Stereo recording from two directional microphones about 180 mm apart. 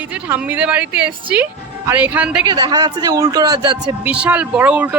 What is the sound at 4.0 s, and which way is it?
Speech, 10° right (ahead or behind).